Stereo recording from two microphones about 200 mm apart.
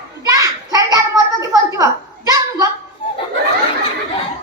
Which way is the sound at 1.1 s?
15° right (ahead or behind).